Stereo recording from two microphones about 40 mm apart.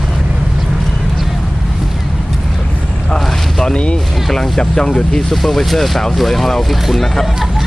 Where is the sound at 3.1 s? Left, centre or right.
Centre.